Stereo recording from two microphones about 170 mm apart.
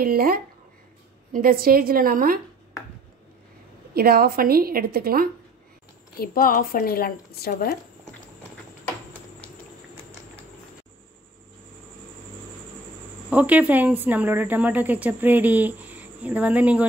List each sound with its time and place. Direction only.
0.0 s a woman's voice: 60° right (ahead or behind)
3.9 s a woman's voice: 65° right (ahead or behind)
6.1 s speech: 60° left (ahead or behind)
13.3 s speech: 10° right (ahead or behind)